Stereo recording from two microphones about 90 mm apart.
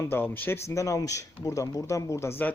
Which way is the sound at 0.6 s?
35° left (ahead or behind).